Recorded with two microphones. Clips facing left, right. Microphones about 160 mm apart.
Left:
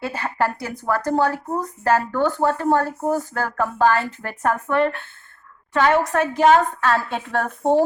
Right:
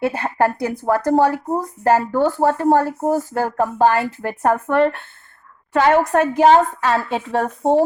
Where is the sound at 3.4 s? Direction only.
20° right (ahead or behind).